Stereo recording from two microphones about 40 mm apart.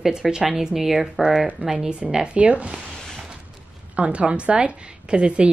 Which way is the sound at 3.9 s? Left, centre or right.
Right.